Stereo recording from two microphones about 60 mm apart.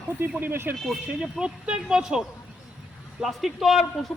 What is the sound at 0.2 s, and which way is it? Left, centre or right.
Speech, right.